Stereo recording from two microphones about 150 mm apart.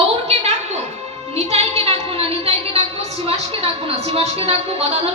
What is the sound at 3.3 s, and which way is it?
A woman's voice, 40° right (ahead or behind).